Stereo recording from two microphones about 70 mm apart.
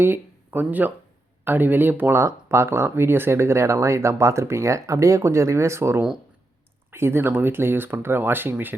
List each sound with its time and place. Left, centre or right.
0.0 s speech: right
2.1 s speech: right